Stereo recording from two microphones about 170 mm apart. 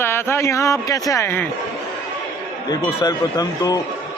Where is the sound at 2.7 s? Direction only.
25° left (ahead or behind).